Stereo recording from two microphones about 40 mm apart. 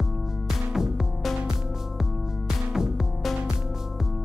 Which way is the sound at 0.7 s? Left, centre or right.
Centre.